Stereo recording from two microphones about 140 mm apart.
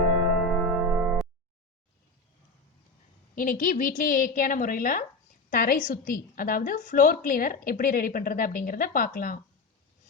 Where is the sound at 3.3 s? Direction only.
80° left.